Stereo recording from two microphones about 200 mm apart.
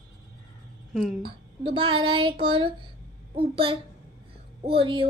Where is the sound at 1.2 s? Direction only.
25° right (ahead or behind).